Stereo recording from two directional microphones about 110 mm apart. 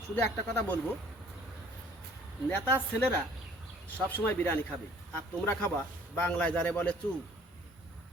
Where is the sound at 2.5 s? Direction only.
20° left (ahead or behind).